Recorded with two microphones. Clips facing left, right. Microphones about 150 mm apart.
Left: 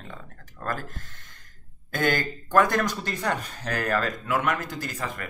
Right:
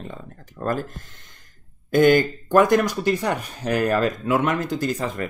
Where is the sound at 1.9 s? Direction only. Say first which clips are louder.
Right 10 dB; 20° right (ahead or behind).